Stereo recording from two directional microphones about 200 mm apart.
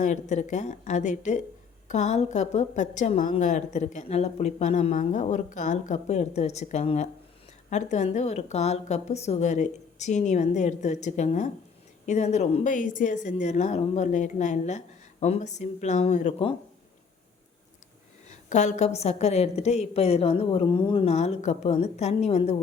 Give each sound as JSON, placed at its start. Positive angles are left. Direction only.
{"t": 0.0, "sound": "a woman's voice", "side_deg": 35}
{"t": 18.3, "sound": "a woman's voice", "side_deg": 35}